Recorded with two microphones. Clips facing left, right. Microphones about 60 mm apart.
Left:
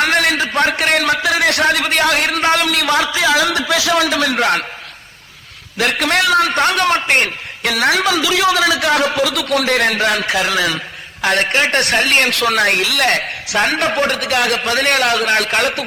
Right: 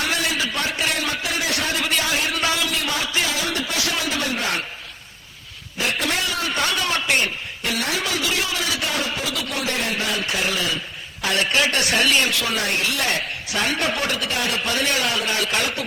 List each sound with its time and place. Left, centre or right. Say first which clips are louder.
0.0 s a sound: left 8 dB; left
2.4 s a man's voice: left 8 dB; left
5.7 s a man's voice: left 8 dB; left
7.6 s a man's voice: left 10 dB; left
11.2 s a man's voice: left 5 dB; left
11.8 s speech: left 5 dB; left